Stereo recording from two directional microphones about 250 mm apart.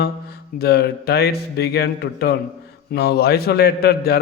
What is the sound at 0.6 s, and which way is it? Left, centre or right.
Mantra, left.